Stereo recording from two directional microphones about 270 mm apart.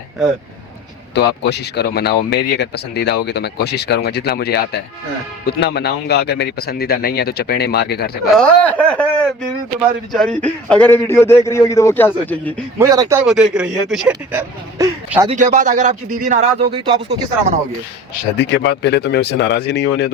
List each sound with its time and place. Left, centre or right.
1.1 s speech: left
8.3 s a man's voice: centre
12.8 s speech: centre
15.4 s speech: right
18.3 s speech: left